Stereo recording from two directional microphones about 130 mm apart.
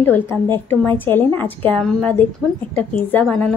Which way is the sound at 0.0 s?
15° left (ahead or behind).